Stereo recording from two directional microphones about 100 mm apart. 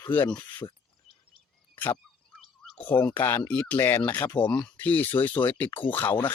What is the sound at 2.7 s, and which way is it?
Speech, 15° left (ahead or behind).